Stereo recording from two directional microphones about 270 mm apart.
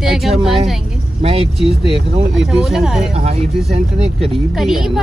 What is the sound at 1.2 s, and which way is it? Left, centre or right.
Speech, right.